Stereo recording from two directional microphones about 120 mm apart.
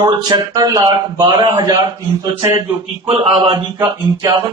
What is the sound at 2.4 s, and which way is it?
Speech, 25° right (ahead or behind).